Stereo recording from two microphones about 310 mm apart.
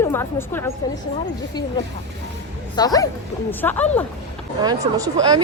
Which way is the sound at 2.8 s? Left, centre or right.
Centre.